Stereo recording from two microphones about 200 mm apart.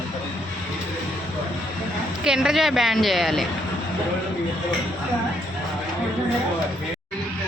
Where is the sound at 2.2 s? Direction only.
5° right (ahead or behind).